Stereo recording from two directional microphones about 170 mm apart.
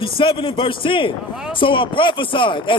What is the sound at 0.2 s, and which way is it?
A man's voice, 30° left (ahead or behind).